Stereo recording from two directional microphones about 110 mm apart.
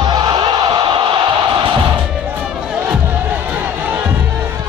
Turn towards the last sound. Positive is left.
turn(degrees=-25)  # may be behind; listen again after turning